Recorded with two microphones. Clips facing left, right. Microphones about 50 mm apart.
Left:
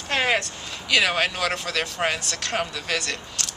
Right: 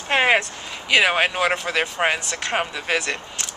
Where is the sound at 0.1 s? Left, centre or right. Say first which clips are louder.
Right 5 dB; right.